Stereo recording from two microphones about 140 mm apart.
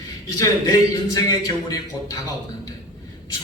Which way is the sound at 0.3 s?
25° left (ahead or behind).